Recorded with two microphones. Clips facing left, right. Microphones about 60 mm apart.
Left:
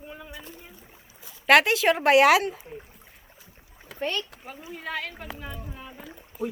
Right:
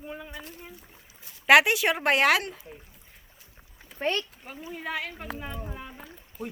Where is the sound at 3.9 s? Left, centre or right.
Left.